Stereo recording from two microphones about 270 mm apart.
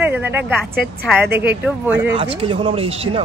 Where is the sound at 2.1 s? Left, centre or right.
Centre.